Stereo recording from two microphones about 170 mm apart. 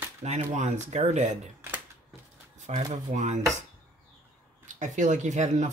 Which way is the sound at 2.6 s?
40° right (ahead or behind).